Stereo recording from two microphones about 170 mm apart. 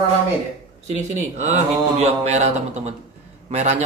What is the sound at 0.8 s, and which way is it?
Speech, 40° right (ahead or behind).